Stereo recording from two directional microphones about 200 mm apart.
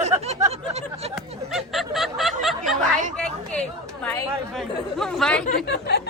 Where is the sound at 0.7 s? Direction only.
30° right (ahead or behind).